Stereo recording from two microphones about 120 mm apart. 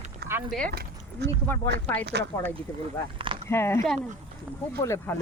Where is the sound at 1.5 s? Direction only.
20° left (ahead or behind).